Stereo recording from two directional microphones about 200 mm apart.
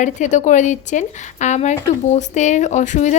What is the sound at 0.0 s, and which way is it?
Speech, 35° left (ahead or behind).